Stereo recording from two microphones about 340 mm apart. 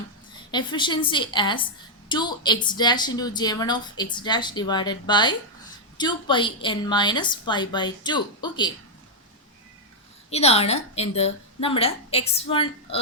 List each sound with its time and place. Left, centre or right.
0.5 s a woman's voice: centre
10.2 s a woman's voice: centre